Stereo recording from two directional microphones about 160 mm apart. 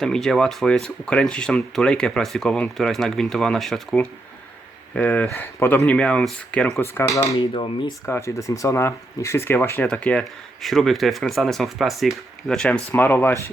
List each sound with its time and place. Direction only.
0.0 s speech: 5° left (ahead or behind)
7.3 s speech: 30° left (ahead or behind)
8.0 s speech: 15° left (ahead or behind)